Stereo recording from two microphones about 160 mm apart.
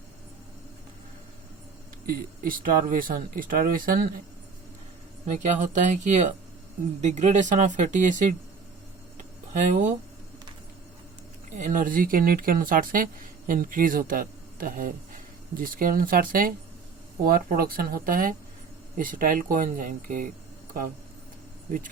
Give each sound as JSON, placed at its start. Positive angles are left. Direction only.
{"t": 2.0, "sound": "speech", "side_deg": -65}
{"t": 5.2, "sound": "speech", "side_deg": -50}
{"t": 9.1, "sound": "a sound", "side_deg": -50}
{"t": 11.5, "sound": "speech", "side_deg": -55}